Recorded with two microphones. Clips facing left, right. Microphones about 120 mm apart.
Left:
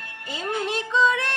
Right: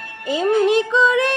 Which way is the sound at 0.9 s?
75° right (ahead or behind).